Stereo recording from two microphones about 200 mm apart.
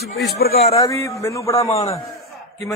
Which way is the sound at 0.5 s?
30° left (ahead or behind).